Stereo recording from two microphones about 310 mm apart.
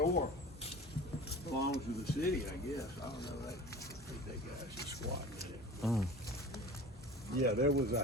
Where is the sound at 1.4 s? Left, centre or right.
Left.